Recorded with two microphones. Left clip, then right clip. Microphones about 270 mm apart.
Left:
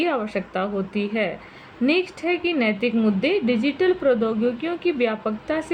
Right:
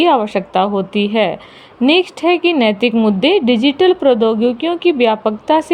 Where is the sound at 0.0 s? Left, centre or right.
Right.